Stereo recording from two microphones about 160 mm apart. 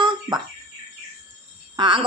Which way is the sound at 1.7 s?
30° right (ahead or behind).